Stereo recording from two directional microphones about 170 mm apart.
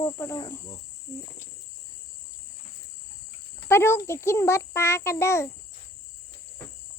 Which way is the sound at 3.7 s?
15° left (ahead or behind).